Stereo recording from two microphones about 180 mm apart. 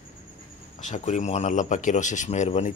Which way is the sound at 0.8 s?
40° left (ahead or behind).